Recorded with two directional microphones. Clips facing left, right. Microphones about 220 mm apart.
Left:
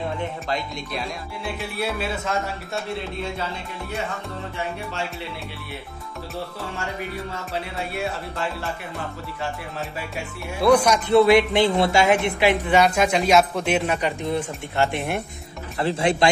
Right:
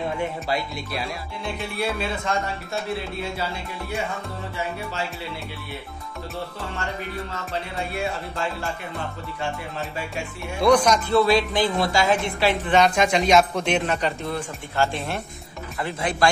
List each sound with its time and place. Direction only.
0.5 s speech: 5° right (ahead or behind)
7.9 s speech: centre (ahead or behind)
11.1 s a woman's voice: 20° left (ahead or behind)
15.8 s speech: 30° left (ahead or behind)